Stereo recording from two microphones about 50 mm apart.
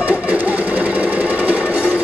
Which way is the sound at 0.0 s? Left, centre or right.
Right.